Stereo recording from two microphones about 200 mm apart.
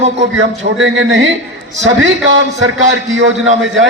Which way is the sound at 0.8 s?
70° right (ahead or behind).